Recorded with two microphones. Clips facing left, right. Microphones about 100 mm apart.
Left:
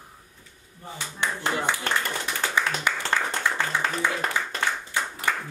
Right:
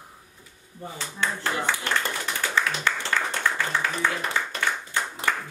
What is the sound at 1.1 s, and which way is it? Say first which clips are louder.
Speech: even; 20° left (ahead or behind).